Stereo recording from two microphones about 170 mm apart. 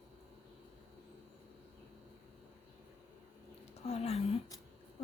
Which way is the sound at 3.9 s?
40° left (ahead or behind).